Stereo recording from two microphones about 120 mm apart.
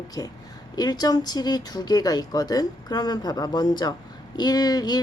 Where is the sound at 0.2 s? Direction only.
30° left (ahead or behind).